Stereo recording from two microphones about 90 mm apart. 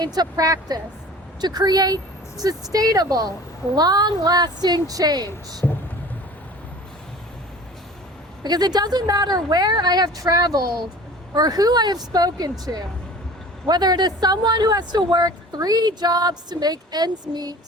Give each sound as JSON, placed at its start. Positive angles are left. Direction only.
{"t": 0.0, "sound": "speech", "side_deg": -50}
{"t": 8.4, "sound": "speech", "side_deg": -50}